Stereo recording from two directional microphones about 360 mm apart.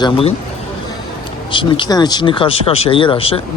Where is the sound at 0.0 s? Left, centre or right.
Centre.